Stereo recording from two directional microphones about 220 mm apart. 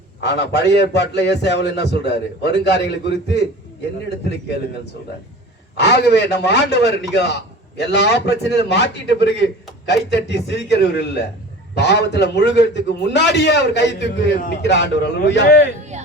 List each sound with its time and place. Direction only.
0.2 s a man's voice: 50° left (ahead or behind)
5.7 s a man's voice: 50° left (ahead or behind)
15.9 s music: 30° right (ahead or behind)